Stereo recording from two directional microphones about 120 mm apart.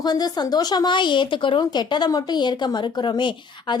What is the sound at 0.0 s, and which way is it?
Speech, 35° left (ahead or behind).